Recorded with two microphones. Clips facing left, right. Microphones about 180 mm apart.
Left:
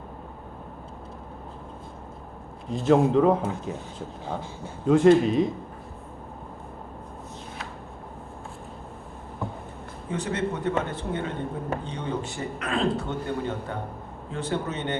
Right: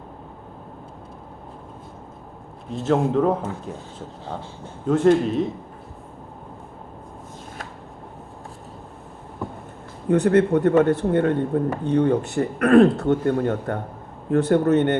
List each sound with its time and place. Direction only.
2.7 s speech: centre (ahead or behind)
10.1 s speech: 65° right (ahead or behind)